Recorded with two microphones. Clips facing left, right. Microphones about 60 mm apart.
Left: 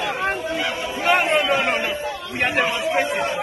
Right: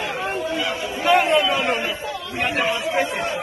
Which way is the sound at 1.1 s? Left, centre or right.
Left.